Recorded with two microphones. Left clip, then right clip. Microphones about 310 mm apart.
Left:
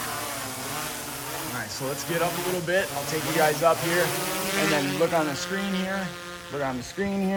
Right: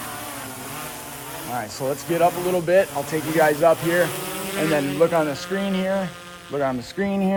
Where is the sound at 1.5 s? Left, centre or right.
Right.